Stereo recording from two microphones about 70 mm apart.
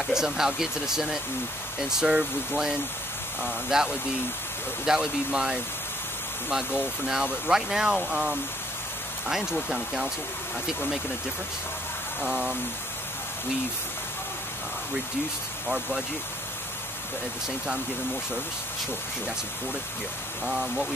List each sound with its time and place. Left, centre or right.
0.0 s speech: centre
12.2 s speech: centre
20.4 s speech: centre